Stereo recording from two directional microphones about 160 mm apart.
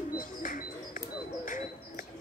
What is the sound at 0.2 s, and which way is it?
Bird, 55° left (ahead or behind).